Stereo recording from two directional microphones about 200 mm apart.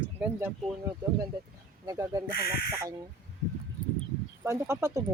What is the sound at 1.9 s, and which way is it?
Speech, 15° right (ahead or behind).